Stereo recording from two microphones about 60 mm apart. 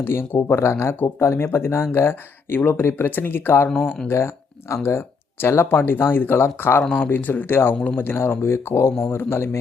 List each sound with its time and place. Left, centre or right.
0.0 s speech: left
4.7 s speech: left